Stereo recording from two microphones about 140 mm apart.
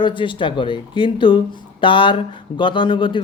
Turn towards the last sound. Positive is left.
turn(degrees=35)  # may be behind; listen again after turning